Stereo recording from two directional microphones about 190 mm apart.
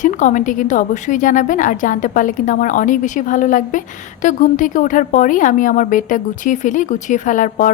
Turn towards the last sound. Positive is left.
turn(degrees=45)  # may be behind; listen again after turning